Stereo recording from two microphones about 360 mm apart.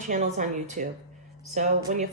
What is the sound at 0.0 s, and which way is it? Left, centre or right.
A woman's voice, centre.